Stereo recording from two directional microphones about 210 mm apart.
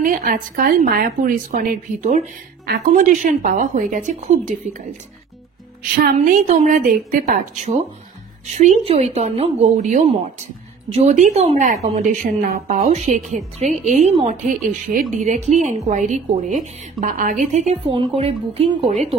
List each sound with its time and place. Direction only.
0.0 s speech: 40° right (ahead or behind)
5.9 s speech: 40° right (ahead or behind)
12.7 s speech: 30° right (ahead or behind)